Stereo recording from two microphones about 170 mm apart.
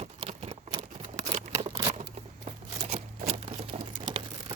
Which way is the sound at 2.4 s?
40° right (ahead or behind).